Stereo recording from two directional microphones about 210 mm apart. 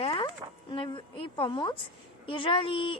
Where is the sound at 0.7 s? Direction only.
25° left (ahead or behind).